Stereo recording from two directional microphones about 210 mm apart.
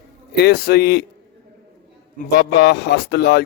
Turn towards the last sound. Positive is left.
turn(degrees=50)  # may be behind; listen again after turning